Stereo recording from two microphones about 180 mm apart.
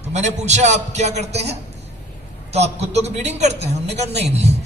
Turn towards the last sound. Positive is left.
turn(degrees=-35)  # may be behind; listen again after turning